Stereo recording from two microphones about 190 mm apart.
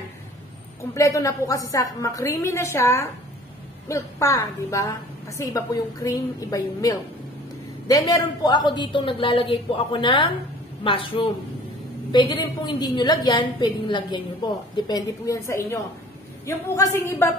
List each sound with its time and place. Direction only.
0.9 s a woman's voice: 15° left (ahead or behind)